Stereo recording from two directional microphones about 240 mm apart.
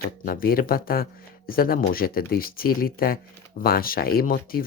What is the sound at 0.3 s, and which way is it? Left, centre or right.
Speech, left.